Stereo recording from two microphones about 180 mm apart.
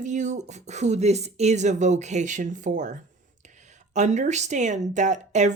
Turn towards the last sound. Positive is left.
turn(degrees=-40)  # may be behind; listen again after turning